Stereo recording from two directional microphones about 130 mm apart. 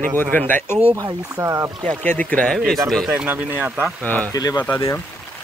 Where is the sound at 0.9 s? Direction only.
25° right (ahead or behind).